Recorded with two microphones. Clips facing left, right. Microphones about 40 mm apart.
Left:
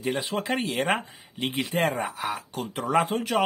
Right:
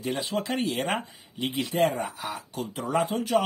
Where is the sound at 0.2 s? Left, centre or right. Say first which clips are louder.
Even; left.